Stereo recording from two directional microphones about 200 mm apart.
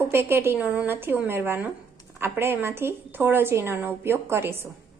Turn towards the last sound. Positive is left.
turn(degrees=-10)  # may be behind; listen again after turning